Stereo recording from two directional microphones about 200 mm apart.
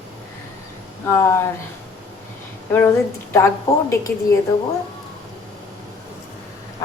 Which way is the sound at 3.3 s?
15° left (ahead or behind).